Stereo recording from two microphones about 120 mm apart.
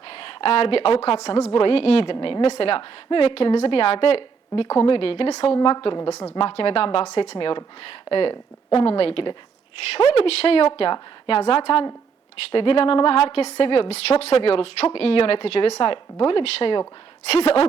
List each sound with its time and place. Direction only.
0.1 s a woman's voice: 50° left (ahead or behind)
7.3 s a woman's voice: 45° left (ahead or behind)